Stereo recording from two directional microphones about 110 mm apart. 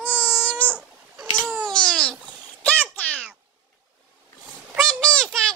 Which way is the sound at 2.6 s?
15° left (ahead or behind).